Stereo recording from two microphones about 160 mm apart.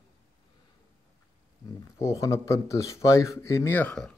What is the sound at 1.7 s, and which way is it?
Speech, 20° left (ahead or behind).